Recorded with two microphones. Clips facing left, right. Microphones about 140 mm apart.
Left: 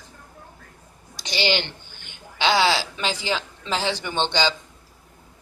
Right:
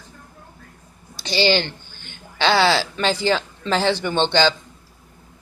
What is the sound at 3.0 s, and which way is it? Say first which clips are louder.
Speech: right 6 dB; 10° left (ahead or behind).